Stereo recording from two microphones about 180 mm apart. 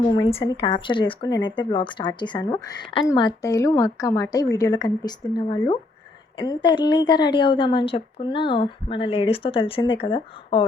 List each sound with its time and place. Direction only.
0.1 s speech: 30° left (ahead or behind)